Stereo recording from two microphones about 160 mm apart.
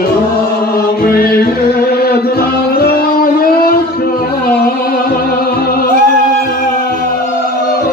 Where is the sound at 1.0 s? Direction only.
65° left (ahead or behind).